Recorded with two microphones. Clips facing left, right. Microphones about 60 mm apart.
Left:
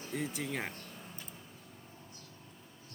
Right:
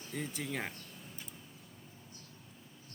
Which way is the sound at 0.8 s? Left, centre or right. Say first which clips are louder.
Left 2 dB; left.